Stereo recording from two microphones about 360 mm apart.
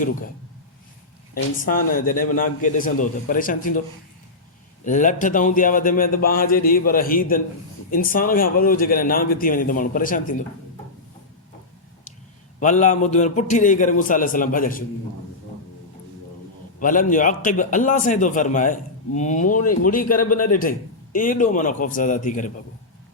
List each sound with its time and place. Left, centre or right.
1.3 s a man's voice: left
4.9 s a man's voice: left
12.5 s a man's voice: centre
16.8 s a man's voice: left